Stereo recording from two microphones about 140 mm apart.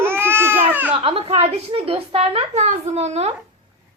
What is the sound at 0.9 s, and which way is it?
A woman's voice, 40° right (ahead or behind).